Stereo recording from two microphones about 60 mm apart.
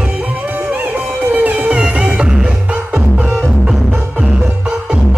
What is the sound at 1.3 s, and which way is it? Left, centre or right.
Music, right.